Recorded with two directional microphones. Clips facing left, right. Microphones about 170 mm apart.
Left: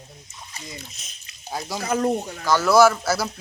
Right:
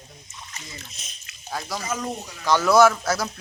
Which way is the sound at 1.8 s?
60° left (ahead or behind).